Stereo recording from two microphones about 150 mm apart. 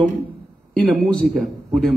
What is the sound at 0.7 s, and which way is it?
A man's voice, 5° left (ahead or behind).